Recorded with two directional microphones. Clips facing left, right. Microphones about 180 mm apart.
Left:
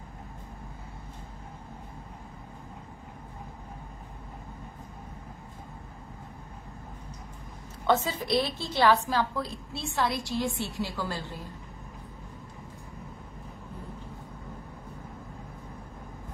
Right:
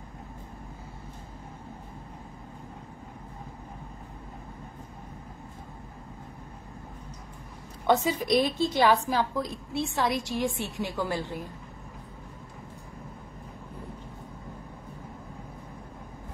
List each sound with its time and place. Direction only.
7.8 s a woman's voice: 15° right (ahead or behind)